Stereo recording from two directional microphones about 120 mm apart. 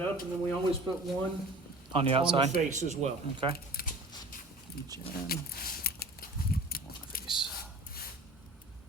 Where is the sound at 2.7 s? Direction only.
85° right.